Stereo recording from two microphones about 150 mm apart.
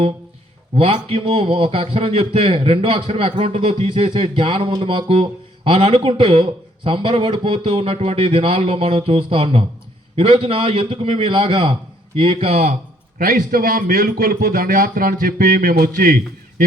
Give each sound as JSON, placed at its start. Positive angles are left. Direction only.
{"t": 0.8, "sound": "a man's voice", "side_deg": -40}
{"t": 13.1, "sound": "a man's voice", "side_deg": -75}